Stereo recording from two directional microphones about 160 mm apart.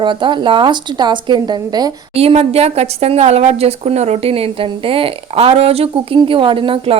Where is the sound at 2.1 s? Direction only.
40° right (ahead or behind).